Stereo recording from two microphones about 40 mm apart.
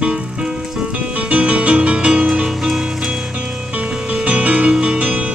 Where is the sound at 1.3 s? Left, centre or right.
Right.